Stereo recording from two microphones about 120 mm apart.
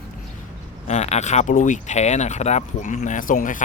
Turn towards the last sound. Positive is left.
turn(degrees=90)